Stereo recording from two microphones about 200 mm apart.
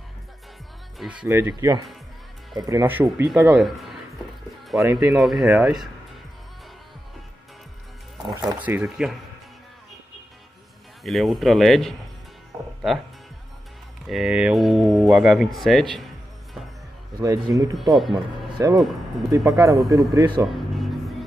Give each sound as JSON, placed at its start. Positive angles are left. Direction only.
{"t": 0.9, "sound": "speech", "side_deg": -5}
{"t": 4.9, "sound": "speech", "side_deg": -5}
{"t": 8.5, "sound": "speech", "side_deg": -5}
{"t": 11.1, "sound": "speech", "side_deg": 0}
{"t": 14.0, "sound": "speech", "side_deg": 0}
{"t": 17.1, "sound": "speech", "side_deg": -20}
{"t": 17.7, "sound": "speech", "side_deg": 0}
{"t": 18.1, "sound": "speech", "side_deg": -20}
{"t": 20.4, "sound": "music", "side_deg": 0}